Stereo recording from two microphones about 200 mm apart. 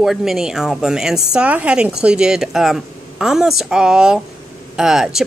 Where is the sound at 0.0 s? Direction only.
Centre (ahead or behind).